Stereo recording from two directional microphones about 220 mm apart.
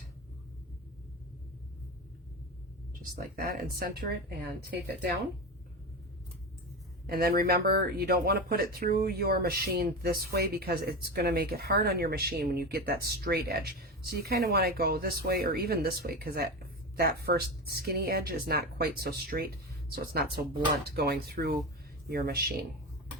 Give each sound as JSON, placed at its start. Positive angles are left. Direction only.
{"t": 2.9, "sound": "speech", "side_deg": -40}
{"t": 7.1, "sound": "speech", "side_deg": -40}